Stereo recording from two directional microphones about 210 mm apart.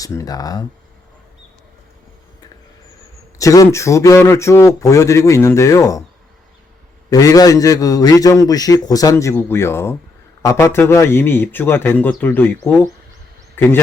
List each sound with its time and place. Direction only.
0.0 s a man's voice: 15° left (ahead or behind)
3.3 s a man's voice: 15° left (ahead or behind)
7.1 s a man's voice: 15° left (ahead or behind)
13.6 s speech: 10° left (ahead or behind)